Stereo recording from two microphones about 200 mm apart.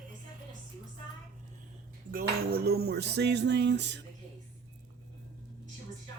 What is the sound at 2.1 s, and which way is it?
Speech, 50° right (ahead or behind).